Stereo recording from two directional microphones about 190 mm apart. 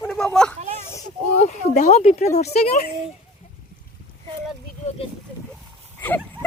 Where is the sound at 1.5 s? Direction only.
40° left (ahead or behind).